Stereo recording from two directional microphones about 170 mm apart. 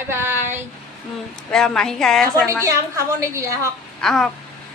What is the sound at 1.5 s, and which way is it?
Speech, 5° left (ahead or behind).